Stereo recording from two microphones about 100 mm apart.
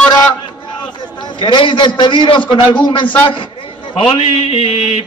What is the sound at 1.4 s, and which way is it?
A man's voice, 50° left (ahead or behind).